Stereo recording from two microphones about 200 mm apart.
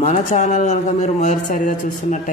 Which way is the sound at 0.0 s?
35° left (ahead or behind).